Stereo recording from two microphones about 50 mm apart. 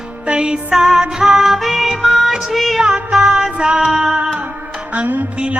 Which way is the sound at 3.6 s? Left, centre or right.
Centre.